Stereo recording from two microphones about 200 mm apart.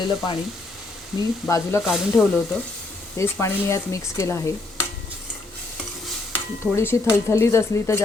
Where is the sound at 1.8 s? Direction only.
Centre (ahead or behind).